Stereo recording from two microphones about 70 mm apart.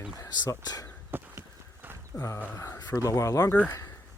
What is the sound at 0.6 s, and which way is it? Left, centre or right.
Speech, left.